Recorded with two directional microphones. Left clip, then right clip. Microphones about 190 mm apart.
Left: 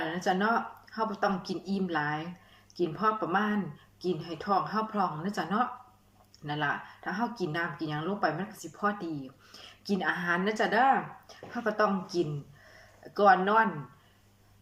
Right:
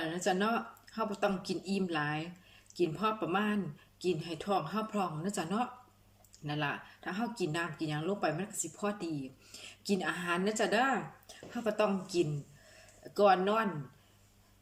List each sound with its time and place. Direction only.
0.1 s speech: 20° right (ahead or behind)